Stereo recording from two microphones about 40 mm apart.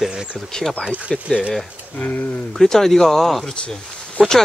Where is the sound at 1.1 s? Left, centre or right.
Centre.